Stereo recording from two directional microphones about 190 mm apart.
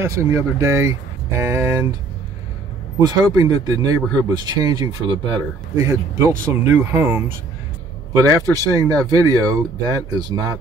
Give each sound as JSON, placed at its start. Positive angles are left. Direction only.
{"t": 0.0, "sound": "speech", "side_deg": -15}
{"t": 3.0, "sound": "speech", "side_deg": -20}
{"t": 6.2, "sound": "speech", "side_deg": -15}